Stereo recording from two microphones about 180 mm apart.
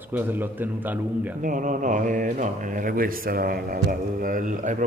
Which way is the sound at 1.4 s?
45° right (ahead or behind).